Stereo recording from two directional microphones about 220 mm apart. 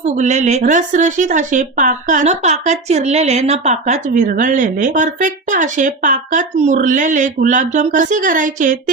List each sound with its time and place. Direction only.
0.0 s a woman's voice: 30° right (ahead or behind)